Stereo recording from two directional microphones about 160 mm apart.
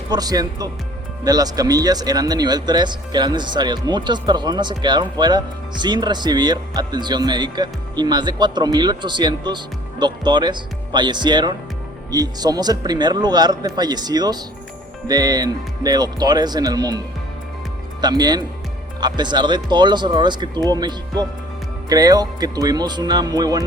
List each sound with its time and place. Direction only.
0.1 s speech: 25° right (ahead or behind)
18.0 s speech: 25° right (ahead or behind)